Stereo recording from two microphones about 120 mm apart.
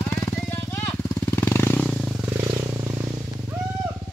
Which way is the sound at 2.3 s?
35° right (ahead or behind).